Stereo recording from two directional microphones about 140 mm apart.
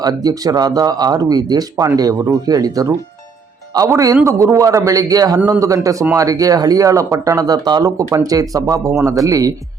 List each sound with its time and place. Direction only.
0.0 s speech: 30° right (ahead or behind)